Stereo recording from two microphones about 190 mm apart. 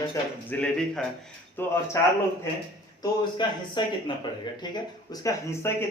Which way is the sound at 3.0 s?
25° left (ahead or behind).